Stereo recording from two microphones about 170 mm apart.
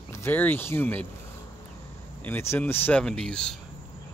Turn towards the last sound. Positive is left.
turn(degrees=5)  # may be behind; listen again after turning